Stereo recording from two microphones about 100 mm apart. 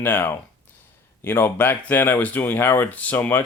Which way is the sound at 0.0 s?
20° left (ahead or behind).